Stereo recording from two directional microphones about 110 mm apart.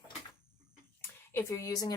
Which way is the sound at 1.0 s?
25° left (ahead or behind).